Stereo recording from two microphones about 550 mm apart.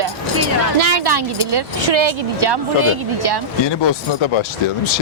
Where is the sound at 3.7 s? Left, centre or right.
Left.